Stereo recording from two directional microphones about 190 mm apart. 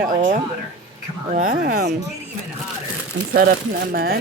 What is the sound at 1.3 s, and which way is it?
Speech, 45° right (ahead or behind).